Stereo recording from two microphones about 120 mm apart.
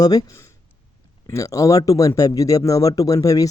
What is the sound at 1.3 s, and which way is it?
Speech, 25° left (ahead or behind).